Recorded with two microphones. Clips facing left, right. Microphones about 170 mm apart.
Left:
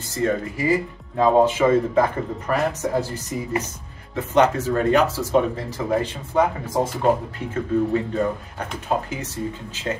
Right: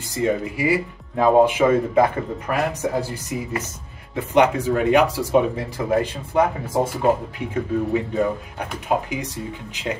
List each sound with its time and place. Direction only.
0.1 s speech: 15° right (ahead or behind)